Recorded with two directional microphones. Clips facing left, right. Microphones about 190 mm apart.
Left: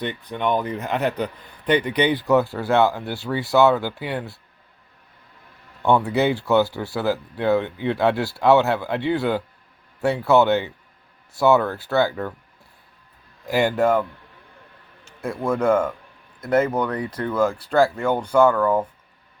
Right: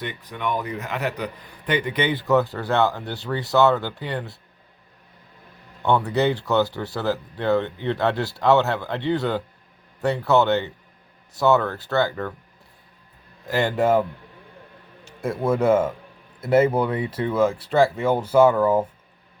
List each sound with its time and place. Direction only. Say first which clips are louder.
0.0 s a man's voice: left 4 dB; 25° left (ahead or behind); by 4.3 s 10° left (ahead or behind)
5.8 s speech: left 1 dB; 10° left (ahead or behind)
13.5 s speech: left 2 dB; 10° left (ahead or behind)
13.7 s speech: right 2 dB; 5° right (ahead or behind)
15.0 s a sound: right 2 dB; centre (ahead or behind)
15.4 s speech: right 1 dB; 5° right (ahead or behind)